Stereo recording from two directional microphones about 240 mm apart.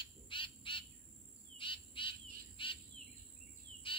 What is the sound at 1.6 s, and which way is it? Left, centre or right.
Bird, left.